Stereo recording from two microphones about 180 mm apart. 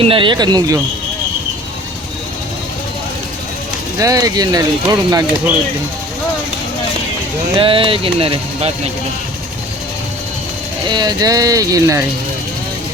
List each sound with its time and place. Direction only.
0.0 s speech: 30° right (ahead or behind)
3.9 s speech: 20° right (ahead or behind)
7.5 s speech: 30° right (ahead or behind)
10.8 s speech: 25° right (ahead or behind)